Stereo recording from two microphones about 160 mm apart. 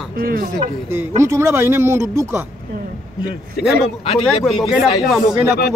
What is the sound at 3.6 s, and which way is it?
Speech, 80° left.